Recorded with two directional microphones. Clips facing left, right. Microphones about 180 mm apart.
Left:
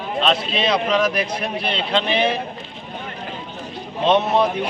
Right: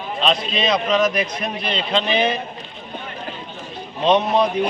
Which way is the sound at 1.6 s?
60° left (ahead or behind).